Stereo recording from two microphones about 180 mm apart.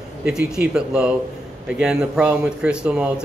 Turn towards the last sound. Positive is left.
turn(degrees=-5)  # may be behind; listen again after turning